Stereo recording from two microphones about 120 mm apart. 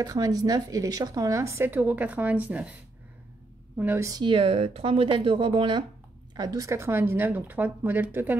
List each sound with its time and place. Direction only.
0.0 s speech: 30° right (ahead or behind); by 2.7 s 10° right (ahead or behind)
3.7 s speech: 15° right (ahead or behind)
4.1 s speech: 45° right (ahead or behind)
6.3 s speech: 30° right (ahead or behind); by 8.4 s 15° right (ahead or behind)